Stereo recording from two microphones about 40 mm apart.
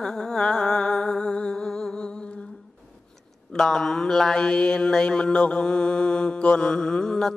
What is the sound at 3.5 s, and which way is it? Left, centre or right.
Mantra, centre.